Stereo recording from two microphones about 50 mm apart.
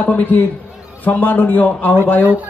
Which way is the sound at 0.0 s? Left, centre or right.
Left.